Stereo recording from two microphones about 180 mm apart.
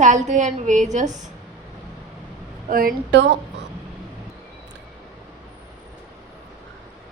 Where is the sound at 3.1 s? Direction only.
80° right.